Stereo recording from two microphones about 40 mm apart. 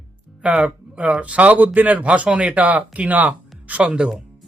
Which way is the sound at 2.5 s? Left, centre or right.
Right.